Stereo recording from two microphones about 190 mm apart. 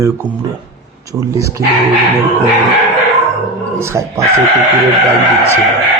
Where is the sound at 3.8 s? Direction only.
15° right (ahead or behind).